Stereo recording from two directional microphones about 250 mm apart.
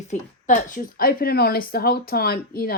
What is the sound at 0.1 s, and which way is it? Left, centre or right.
Speech, left.